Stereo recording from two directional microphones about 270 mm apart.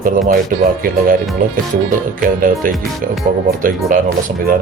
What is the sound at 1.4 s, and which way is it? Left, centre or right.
Speech, right.